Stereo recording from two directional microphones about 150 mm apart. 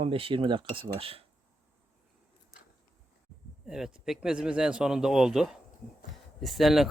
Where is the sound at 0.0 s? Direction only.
40° right (ahead or behind).